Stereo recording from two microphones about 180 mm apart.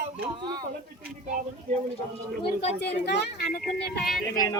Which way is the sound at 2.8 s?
65° left (ahead or behind).